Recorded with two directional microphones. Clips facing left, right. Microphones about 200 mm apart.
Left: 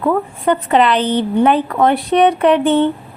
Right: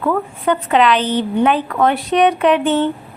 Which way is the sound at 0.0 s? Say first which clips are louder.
Left 2 dB; 15° left (ahead or behind).